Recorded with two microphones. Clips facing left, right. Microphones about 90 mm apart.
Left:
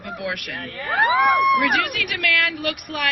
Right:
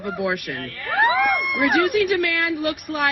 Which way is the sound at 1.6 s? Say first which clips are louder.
Right 4 dB; 25° right (ahead or behind).